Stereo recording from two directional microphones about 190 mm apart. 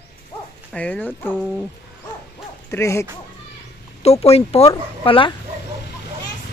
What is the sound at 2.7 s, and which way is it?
Speech, 15° left (ahead or behind).